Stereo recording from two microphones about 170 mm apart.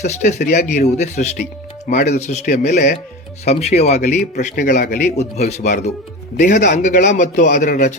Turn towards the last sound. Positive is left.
turn(degrees=50)  # may be behind; listen again after turning